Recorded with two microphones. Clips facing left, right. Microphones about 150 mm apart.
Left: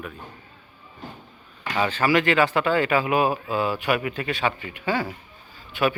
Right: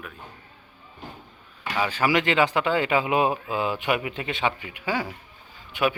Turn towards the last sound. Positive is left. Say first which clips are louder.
# left 1 dB
turn(degrees=-15)  # may be behind; listen again after turning